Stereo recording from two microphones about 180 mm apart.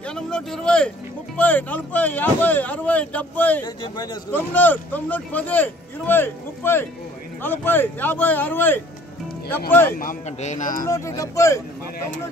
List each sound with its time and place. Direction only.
0.0 s speech: 5° left (ahead or behind)
3.6 s a man's voice: 25° left (ahead or behind)
4.3 s speech: 10° left (ahead or behind)
9.9 s speech: 45° left (ahead or behind)
10.9 s speech: 15° left (ahead or behind)